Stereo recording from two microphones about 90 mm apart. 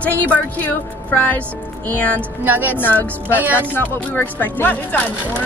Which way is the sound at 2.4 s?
20° right (ahead or behind).